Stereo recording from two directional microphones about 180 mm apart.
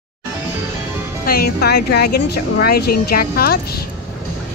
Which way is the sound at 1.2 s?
55° left (ahead or behind).